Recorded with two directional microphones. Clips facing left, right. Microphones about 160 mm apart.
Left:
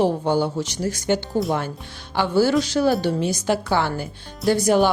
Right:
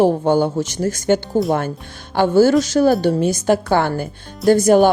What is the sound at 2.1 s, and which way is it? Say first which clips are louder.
Speech: right 6 dB; 50° right (ahead or behind).